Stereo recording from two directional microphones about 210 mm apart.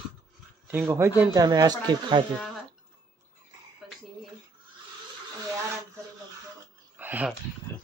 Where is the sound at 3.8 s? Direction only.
Centre (ahead or behind).